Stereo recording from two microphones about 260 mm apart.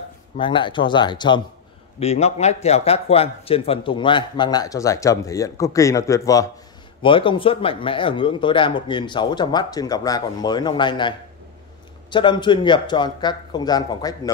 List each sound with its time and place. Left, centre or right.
0.4 s a man's voice: centre